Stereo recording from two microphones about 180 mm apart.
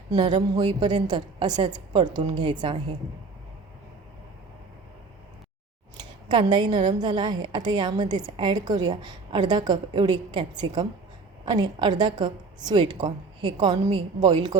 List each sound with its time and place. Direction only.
0.1 s a woman's voice: 25° right (ahead or behind)
6.0 s a woman's voice: 25° right (ahead or behind)